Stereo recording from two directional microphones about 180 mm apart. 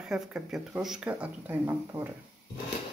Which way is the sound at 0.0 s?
5° right (ahead or behind).